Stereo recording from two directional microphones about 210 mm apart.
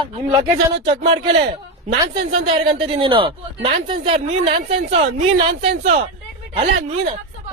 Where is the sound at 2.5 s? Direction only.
25° right (ahead or behind).